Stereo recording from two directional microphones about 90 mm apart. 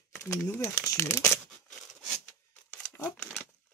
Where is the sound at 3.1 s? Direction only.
15° left (ahead or behind).